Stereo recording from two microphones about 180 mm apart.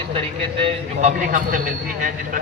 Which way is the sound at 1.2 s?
45° right (ahead or behind).